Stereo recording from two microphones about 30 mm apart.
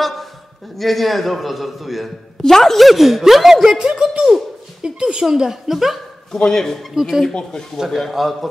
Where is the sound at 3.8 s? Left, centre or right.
Right; by 5.9 s centre.